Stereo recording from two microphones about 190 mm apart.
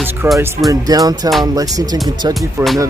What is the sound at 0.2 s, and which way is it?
Speech, 15° right (ahead or behind).